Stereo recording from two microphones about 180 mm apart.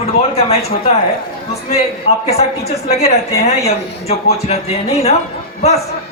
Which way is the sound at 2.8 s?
35° left (ahead or behind).